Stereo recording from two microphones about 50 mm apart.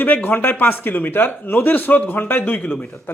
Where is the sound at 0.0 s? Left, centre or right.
Left.